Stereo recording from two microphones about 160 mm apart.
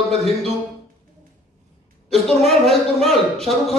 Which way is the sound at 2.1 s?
Centre (ahead or behind).